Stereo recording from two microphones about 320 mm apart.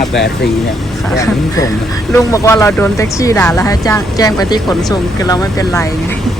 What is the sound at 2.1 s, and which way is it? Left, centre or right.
Speech, centre.